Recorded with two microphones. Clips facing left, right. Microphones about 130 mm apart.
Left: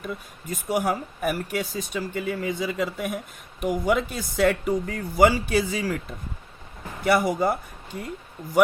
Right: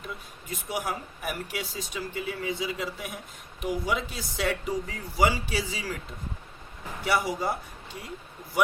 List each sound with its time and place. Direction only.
0.0 s speech: 45° left (ahead or behind)
7.0 s speech: 50° left (ahead or behind)